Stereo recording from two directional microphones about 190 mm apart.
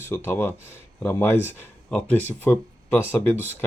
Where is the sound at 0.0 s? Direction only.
10° left (ahead or behind).